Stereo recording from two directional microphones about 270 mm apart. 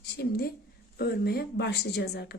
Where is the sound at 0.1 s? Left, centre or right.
Left.